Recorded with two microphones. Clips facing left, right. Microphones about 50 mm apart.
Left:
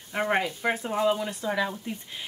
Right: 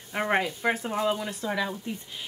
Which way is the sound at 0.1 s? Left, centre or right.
Centre.